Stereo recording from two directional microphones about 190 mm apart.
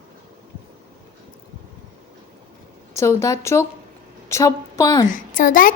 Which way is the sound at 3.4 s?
15° left (ahead or behind).